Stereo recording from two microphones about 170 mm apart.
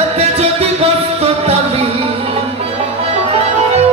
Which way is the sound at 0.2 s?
35° right (ahead or behind).